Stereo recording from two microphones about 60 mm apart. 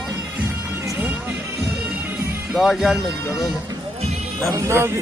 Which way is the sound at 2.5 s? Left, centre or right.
Centre.